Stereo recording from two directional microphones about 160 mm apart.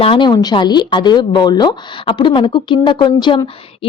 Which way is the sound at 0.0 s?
30° left (ahead or behind).